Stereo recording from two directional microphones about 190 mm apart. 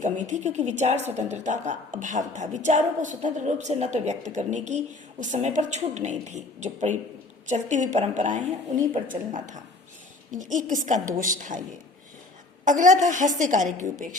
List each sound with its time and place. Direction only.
0.0 s a woman's voice: 40° right (ahead or behind)
12.6 s a woman's voice: 40° right (ahead or behind)